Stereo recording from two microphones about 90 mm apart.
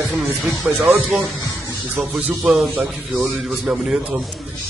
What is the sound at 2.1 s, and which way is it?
Speech, 15° right (ahead or behind).